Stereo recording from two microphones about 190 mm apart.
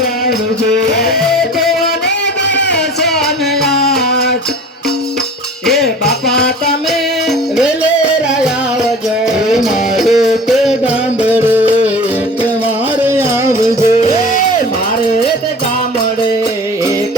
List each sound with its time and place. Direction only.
0.9 s music: 55° left (ahead or behind)
2.6 s music: 65° left (ahead or behind)
3.0 s music: centre (ahead or behind)
5.7 s music: 60° left (ahead or behind)
7.3 s music: centre (ahead or behind)
9.2 s music: centre (ahead or behind)
13.0 s music: 10° right (ahead or behind)